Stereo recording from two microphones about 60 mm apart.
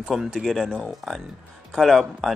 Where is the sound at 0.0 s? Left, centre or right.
Centre.